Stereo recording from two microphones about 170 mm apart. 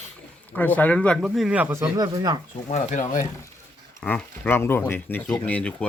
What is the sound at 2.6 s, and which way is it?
Speech, 45° left (ahead or behind).